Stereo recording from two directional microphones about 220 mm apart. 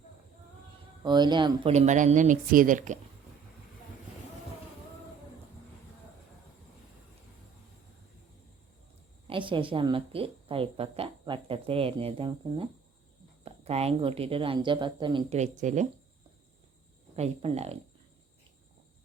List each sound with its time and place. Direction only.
1.0 s speech: 20° right (ahead or behind); by 3.0 s 35° right (ahead or behind)
9.2 s speech: 25° right (ahead or behind)
17.2 s speech: 30° right (ahead or behind)